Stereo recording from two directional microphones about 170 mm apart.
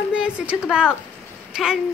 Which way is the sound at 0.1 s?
5° right (ahead or behind).